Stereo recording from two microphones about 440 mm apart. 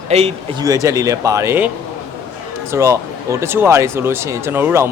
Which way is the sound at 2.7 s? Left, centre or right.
Centre.